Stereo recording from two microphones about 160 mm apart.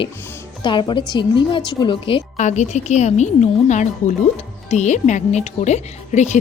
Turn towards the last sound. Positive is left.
turn(degrees=45)  # may be behind; listen again after turning